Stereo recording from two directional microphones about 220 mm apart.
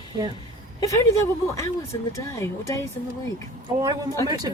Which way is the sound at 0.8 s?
15° left (ahead or behind).